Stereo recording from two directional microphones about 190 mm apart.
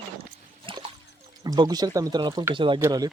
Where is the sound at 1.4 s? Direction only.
20° right (ahead or behind).